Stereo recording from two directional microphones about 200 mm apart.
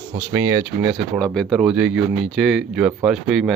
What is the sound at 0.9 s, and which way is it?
Speech, centre (ahead or behind).